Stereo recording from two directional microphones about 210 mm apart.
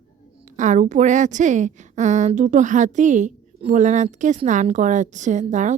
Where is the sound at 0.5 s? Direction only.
35° right (ahead or behind).